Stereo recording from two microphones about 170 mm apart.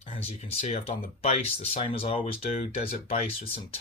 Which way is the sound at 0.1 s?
40° left (ahead or behind).